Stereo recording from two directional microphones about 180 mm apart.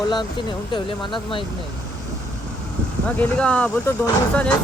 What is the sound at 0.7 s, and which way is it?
Speech, 25° left (ahead or behind).